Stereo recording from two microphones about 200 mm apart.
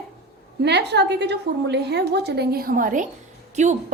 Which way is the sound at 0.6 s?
60° right (ahead or behind).